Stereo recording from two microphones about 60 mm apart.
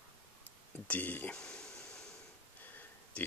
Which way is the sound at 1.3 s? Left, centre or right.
Centre.